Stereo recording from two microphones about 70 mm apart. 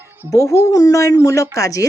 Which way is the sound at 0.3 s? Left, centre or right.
Left.